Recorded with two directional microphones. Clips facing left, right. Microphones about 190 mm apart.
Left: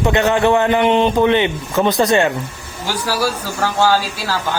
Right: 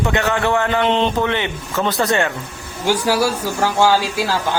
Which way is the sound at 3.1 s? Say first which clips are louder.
Right 2 dB; 25° right (ahead or behind).